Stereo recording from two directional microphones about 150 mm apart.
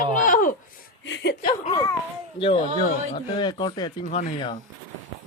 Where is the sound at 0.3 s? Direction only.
60° left (ahead or behind).